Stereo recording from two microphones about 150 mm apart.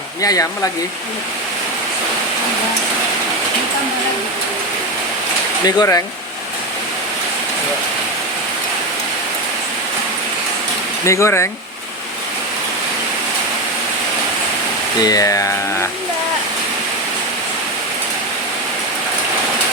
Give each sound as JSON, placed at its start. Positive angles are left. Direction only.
{"t": 0.2, "sound": "speech", "side_deg": 20}
{"t": 5.6, "sound": "speech", "side_deg": 25}
{"t": 11.0, "sound": "speech", "side_deg": 20}
{"t": 15.0, "sound": "speech", "side_deg": 25}